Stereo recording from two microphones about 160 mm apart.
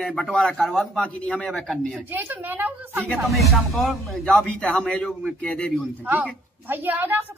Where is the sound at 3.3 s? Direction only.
Centre (ahead or behind).